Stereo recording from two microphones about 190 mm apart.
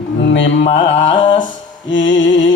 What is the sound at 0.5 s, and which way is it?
Music, 35° left (ahead or behind).